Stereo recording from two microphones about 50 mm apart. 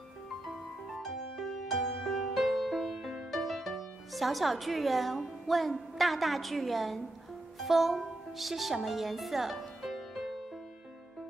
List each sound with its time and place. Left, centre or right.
0.9 s music: centre
7.5 s speech: centre